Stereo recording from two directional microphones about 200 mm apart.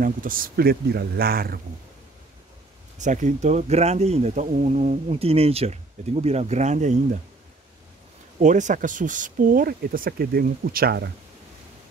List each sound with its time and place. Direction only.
0.0 s speech: 45° right (ahead or behind)
3.0 s speech: 40° right (ahead or behind)
8.4 s speech: 40° right (ahead or behind)